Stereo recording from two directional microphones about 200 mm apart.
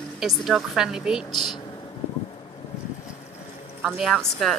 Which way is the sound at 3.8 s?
Centre (ahead or behind).